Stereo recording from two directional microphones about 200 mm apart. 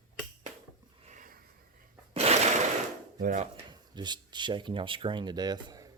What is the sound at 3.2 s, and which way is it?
Speech, 35° right (ahead or behind).